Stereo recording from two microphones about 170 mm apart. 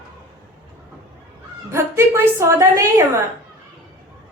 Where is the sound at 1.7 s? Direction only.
15° right (ahead or behind).